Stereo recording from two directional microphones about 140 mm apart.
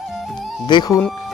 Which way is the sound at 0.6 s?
30° left (ahead or behind).